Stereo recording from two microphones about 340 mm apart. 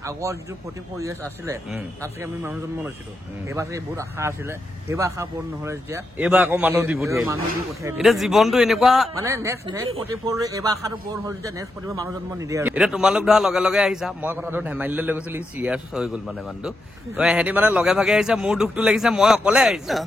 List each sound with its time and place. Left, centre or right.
0.0 s speech: centre
1.4 s a man's voice: centre